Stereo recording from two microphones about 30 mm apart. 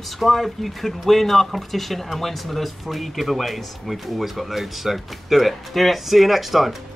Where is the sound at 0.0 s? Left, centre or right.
Centre.